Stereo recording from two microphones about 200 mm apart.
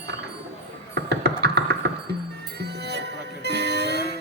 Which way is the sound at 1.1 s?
60° right (ahead or behind).